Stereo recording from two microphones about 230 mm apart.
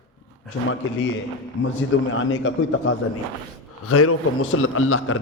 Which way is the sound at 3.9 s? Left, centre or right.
Left.